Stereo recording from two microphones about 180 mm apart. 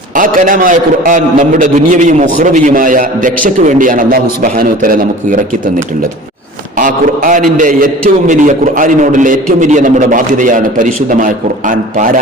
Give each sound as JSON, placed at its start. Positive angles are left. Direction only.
{"t": 0.2, "sound": "a man's voice", "side_deg": -50}
{"t": 6.7, "sound": "a man's voice", "side_deg": -45}